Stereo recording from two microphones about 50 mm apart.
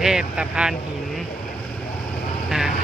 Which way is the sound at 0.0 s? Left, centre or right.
Centre.